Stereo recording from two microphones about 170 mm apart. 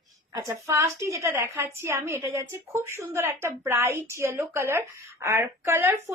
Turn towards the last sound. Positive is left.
turn(degrees=-15)  # may be behind; listen again after turning